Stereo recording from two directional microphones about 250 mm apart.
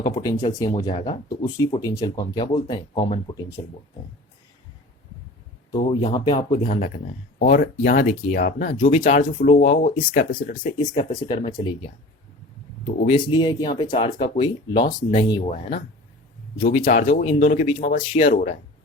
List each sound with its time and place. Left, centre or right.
0.0 s speech: centre
5.7 s speech: centre
6.7 s speech: left
10.6 s speech: left
13.1 s speech: centre
16.8 s speech: left